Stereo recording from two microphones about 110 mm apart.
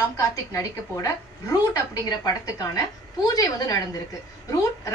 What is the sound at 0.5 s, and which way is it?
A woman's voice, 25° left (ahead or behind).